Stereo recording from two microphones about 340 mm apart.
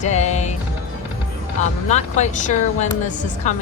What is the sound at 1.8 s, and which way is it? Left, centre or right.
A woman's voice, centre.